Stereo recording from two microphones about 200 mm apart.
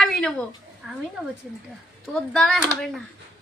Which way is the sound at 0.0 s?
5° left (ahead or behind).